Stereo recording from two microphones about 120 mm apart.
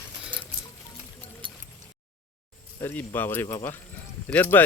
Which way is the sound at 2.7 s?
15° left (ahead or behind).